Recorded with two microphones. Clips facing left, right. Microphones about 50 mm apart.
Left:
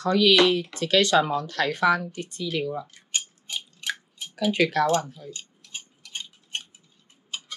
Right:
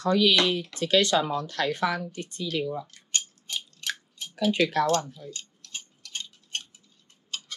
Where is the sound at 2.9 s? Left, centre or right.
Centre.